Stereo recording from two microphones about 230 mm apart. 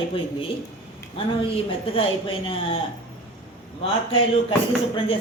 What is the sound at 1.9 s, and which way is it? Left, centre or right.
Speech, left.